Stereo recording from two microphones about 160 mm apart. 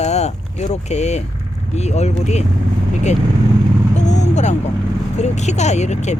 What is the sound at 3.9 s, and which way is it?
Vehicle, 45° left (ahead or behind).